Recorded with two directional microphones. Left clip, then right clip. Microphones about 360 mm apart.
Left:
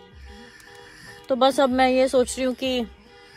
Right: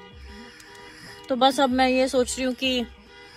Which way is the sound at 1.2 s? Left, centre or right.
Centre.